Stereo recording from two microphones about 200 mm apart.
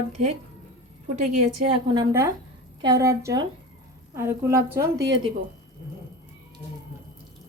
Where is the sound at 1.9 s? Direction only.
15° right (ahead or behind).